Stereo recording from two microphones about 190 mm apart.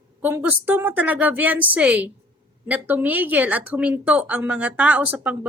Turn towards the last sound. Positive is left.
turn(degrees=-10)  # may be behind; listen again after turning